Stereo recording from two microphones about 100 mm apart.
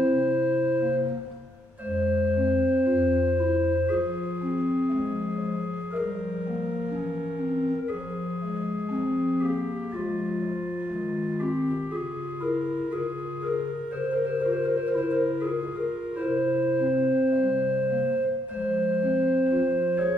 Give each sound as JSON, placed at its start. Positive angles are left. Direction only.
{"t": 0.0, "sound": "organ", "side_deg": -15}
{"t": 2.0, "sound": "music", "side_deg": -15}
{"t": 8.9, "sound": "organ", "side_deg": -15}
{"t": 15.0, "sound": "music", "side_deg": -15}
{"t": 16.3, "sound": "organ", "side_deg": -15}